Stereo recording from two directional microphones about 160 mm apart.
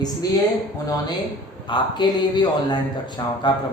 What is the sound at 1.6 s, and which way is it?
Speech, 30° left (ahead or behind).